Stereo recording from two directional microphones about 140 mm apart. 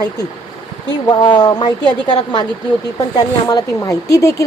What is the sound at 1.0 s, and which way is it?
A woman's voice, 30° left (ahead or behind).